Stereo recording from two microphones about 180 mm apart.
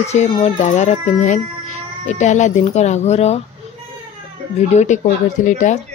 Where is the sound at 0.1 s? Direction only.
40° left (ahead or behind).